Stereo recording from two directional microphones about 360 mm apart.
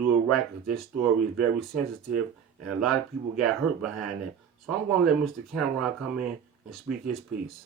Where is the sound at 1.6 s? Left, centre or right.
Centre.